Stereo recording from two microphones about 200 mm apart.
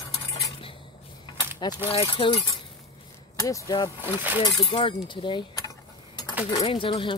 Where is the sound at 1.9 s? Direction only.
30° left (ahead or behind).